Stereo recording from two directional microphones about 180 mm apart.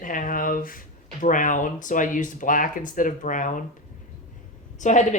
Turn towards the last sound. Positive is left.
turn(degrees=45)  # may be behind; listen again after turning